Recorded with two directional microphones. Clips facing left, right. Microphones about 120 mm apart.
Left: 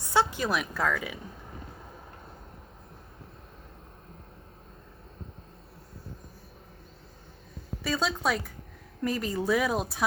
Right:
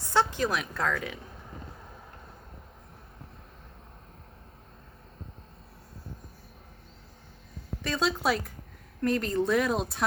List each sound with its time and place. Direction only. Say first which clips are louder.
0.1 s speech: even; 10° left (ahead or behind)
7.9 s a woman's voice: right 1 dB; centre (ahead or behind)